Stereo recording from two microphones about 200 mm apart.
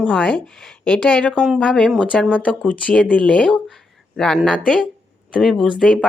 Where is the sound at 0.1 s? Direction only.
5° left (ahead or behind).